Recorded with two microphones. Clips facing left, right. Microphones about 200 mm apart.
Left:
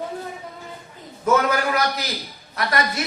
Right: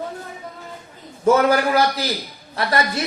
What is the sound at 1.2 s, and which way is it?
A man's voice, 30° right (ahead or behind).